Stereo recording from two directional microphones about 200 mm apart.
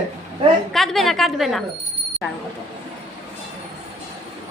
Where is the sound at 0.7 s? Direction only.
Centre (ahead or behind).